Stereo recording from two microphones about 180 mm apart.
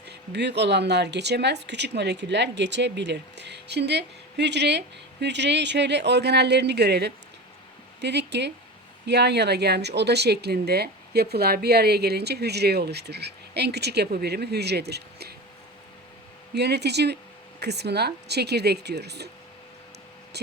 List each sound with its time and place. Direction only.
0.1 s speech: 70° right (ahead or behind)
16.6 s speech: 65° right (ahead or behind)